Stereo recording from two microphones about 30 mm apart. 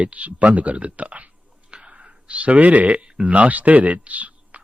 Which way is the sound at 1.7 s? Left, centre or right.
Right.